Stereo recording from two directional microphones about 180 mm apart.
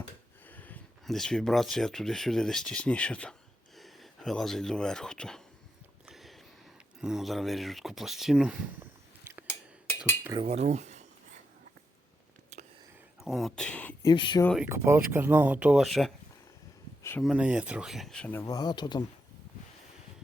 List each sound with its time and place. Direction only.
0.4 s speech: 10° left (ahead or behind)
6.1 s a sound: centre (ahead or behind)
7.0 s speech: centre (ahead or behind)
10.3 s cutlery: 35° right (ahead or behind)
12.5 s whispering: 40° right (ahead or behind)
13.2 s speech: centre (ahead or behind)
14.0 s speech: 25° left (ahead or behind)
14.6 s speech: 10° right (ahead or behind)
17.0 s a sound: 15° left (ahead or behind)
17.2 s speech: 5° right (ahead or behind); by 19.0 s 25° left (ahead or behind)